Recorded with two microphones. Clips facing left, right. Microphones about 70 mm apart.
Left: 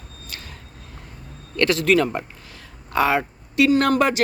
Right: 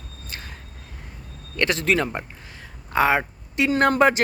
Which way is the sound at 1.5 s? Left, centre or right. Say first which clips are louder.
Left 4 dB; right.